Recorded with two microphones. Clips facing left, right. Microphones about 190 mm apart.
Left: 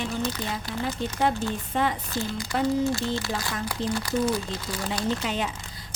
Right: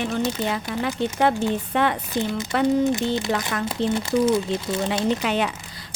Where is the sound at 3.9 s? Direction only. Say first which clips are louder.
Right 6 dB; 25° right (ahead or behind).